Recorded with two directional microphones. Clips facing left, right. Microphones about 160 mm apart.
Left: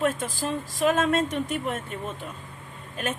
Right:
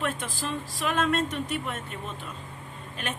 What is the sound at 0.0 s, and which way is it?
Speech, 45° left (ahead or behind).